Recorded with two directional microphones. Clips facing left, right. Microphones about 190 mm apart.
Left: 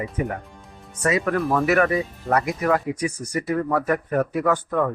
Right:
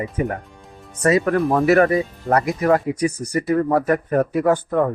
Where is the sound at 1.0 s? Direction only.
35° right (ahead or behind).